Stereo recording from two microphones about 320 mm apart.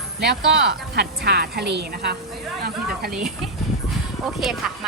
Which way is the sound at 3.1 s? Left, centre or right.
Centre.